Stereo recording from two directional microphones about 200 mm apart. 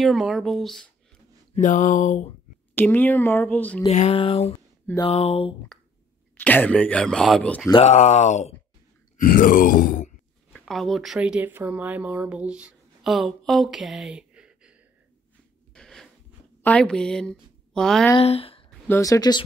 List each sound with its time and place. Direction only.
0.0 s speech: centre (ahead or behind)
1.5 s speech: 40° left (ahead or behind)
2.7 s speech: 10° left (ahead or behind)
3.8 s speech: 30° left (ahead or behind)
6.3 s speech: 10° left (ahead or behind)
7.7 s speech: 35° left (ahead or behind)
9.2 s groan: 40° left (ahead or behind)
10.5 s speech: centre (ahead or behind)
15.7 s a sound: 5° left (ahead or behind)
16.6 s a woman's voice: 5° left (ahead or behind)
18.2 s speech: 30° left (ahead or behind)
18.7 s speech: 15° left (ahead or behind)